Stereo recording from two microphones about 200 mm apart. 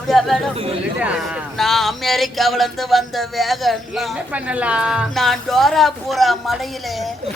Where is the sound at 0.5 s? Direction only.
30° right (ahead or behind).